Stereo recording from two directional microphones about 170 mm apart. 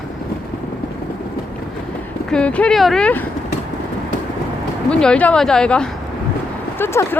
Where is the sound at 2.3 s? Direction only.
5° left (ahead or behind).